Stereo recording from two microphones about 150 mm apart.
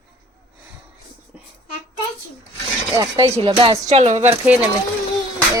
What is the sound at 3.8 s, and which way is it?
Speech, 50° right (ahead or behind).